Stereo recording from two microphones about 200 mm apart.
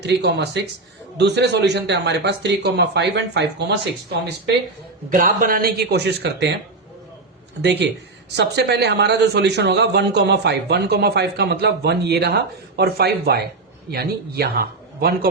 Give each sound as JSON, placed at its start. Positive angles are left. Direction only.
{"t": 0.0, "sound": "a man's voice", "side_deg": -60}
{"t": 5.0, "sound": "speech", "side_deg": -45}
{"t": 7.6, "sound": "a man's voice", "side_deg": -60}